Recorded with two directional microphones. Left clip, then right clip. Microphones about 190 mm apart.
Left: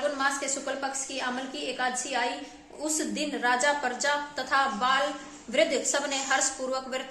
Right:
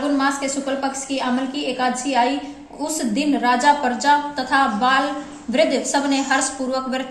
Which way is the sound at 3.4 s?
40° left (ahead or behind).